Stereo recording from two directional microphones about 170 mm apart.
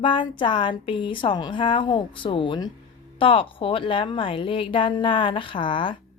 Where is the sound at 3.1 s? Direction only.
30° left (ahead or behind).